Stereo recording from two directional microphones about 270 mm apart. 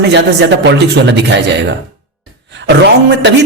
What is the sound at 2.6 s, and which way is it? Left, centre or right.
Speech, right.